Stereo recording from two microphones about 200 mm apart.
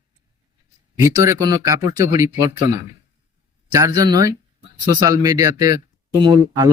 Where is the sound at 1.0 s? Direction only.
15° right (ahead or behind).